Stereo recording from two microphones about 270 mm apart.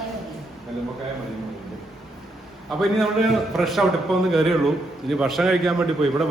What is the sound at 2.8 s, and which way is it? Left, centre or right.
A man's voice, centre.